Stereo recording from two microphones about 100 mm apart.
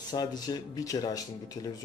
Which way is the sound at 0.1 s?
45° left (ahead or behind).